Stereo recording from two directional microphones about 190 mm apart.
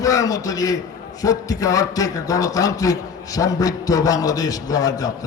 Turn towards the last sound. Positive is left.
turn(degrees=20)  # may be behind; listen again after turning